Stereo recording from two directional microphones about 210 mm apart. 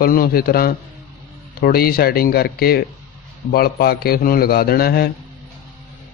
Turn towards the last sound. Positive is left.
turn(degrees=45)  # may be behind; listen again after turning